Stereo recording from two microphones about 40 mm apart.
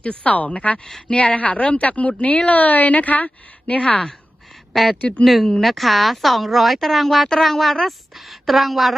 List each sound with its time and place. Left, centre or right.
0.0 s a woman's voice: left
0.9 s speech: centre
1.1 s a woman's voice: left
4.7 s speech: centre
4.9 s a woman's voice: left
5.2 s a woman's voice: centre